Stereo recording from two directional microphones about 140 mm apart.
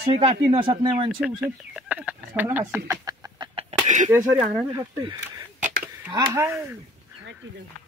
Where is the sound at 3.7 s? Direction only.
50° right (ahead or behind).